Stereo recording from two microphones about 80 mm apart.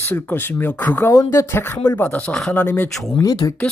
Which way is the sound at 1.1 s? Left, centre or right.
Left.